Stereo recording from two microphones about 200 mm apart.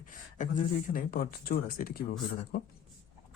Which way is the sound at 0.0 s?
40° left (ahead or behind).